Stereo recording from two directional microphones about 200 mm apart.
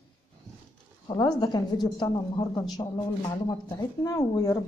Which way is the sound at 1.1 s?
20° left (ahead or behind).